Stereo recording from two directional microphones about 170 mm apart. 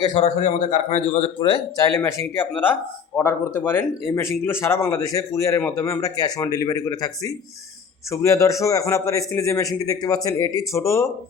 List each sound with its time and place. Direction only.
0.0 s a man's voice: 30° left (ahead or behind)
0.3 s a man's voice: 45° left (ahead or behind)
1.4 s a man's voice: 25° left (ahead or behind)
2.0 s a man's voice: 15° left (ahead or behind)